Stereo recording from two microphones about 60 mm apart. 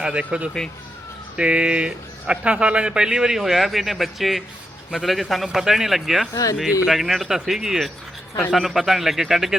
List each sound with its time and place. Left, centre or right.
0.0 s a man's voice: centre
6.3 s speech: left
6.8 s speech: centre